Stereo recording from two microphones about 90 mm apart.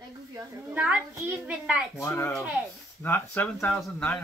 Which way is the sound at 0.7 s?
15° right (ahead or behind).